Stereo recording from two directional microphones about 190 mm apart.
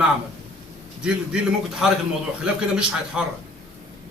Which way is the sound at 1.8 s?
Centre (ahead or behind).